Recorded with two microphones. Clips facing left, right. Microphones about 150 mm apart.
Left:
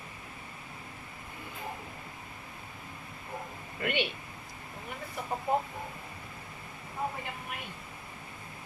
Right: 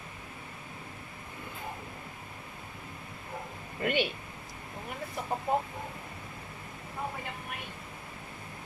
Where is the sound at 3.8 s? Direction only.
40° right (ahead or behind).